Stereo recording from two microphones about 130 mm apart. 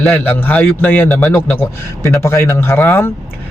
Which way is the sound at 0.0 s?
15° left (ahead or behind).